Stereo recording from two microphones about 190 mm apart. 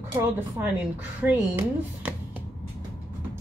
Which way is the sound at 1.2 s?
10° right (ahead or behind).